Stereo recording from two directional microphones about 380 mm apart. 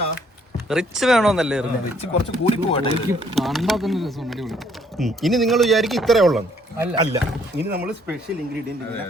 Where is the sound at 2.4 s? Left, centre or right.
Centre.